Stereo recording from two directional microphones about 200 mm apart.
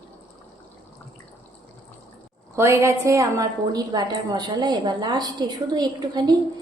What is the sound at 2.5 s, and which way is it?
A woman's voice, 15° right (ahead or behind).